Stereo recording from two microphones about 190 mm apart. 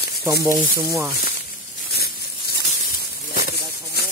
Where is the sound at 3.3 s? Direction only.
50° left (ahead or behind).